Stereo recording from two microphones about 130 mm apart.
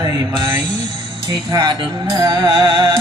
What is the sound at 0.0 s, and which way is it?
Mantra, 35° right (ahead or behind).